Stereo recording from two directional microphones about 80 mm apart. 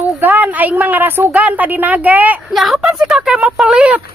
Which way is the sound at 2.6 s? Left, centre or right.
Centre.